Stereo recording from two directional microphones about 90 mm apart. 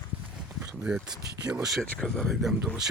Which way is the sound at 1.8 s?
10° left (ahead or behind).